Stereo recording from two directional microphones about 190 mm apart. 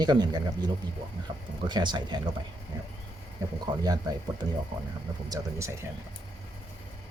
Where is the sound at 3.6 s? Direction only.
20° right (ahead or behind).